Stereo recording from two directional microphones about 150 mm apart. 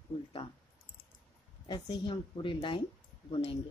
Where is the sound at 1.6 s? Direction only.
30° left (ahead or behind).